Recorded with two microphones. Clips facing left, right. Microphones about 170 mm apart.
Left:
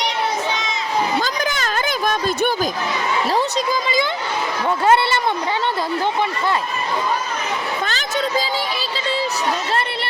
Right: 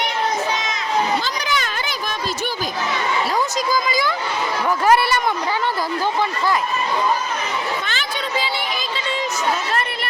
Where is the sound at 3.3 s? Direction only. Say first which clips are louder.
Left 1 dB; 25° left (ahead or behind).